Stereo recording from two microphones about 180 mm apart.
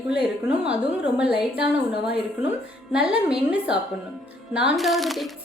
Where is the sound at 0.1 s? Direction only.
5° right (ahead or behind).